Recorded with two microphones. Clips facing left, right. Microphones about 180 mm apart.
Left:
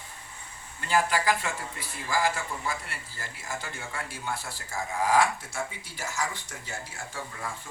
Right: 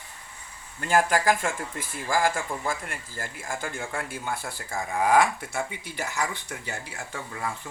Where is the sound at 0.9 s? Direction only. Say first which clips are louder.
Right 3 dB; 50° right (ahead or behind).